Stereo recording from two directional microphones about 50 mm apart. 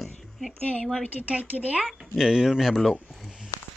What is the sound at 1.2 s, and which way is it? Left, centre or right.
Speech, right.